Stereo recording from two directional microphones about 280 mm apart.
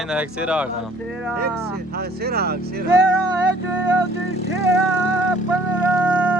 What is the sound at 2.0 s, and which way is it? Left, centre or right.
Speech, right.